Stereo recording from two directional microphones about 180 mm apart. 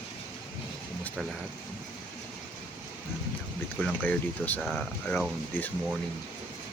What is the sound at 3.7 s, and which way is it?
Speech, 5° left (ahead or behind).